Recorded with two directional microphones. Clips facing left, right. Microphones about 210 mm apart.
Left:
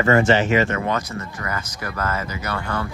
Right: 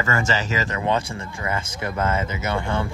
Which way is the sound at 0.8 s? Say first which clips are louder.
Right 1 dB; 30° right (ahead or behind).